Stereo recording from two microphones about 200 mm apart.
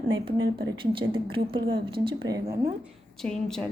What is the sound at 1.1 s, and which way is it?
A woman's voice, 25° right (ahead or behind).